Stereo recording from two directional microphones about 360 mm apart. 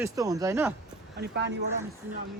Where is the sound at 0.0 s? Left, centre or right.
Centre.